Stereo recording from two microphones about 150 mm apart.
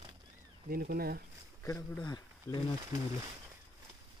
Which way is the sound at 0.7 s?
90° right.